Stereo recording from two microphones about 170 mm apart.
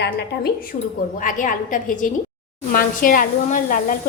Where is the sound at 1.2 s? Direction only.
50° left (ahead or behind).